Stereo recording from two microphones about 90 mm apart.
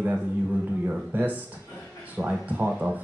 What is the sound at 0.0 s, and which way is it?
Speech, 15° right (ahead or behind).